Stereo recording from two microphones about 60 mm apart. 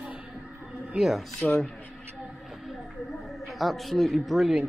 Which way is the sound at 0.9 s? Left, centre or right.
Centre.